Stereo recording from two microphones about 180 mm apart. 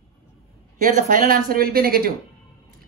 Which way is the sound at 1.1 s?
50° right (ahead or behind).